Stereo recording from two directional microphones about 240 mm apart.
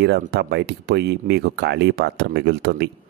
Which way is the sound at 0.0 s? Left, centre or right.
Right.